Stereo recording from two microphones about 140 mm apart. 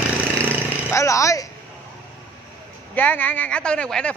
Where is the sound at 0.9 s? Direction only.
20° left (ahead or behind).